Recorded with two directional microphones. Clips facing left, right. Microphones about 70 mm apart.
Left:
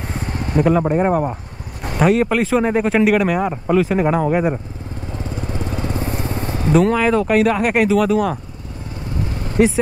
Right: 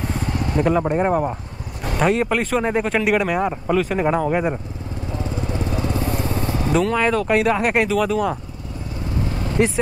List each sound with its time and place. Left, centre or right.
0.0 s vehicle: left
0.6 s speech: centre
5.1 s lawn mower: left
5.9 s vehicle: left
7.0 s speech: centre
9.6 s speech: centre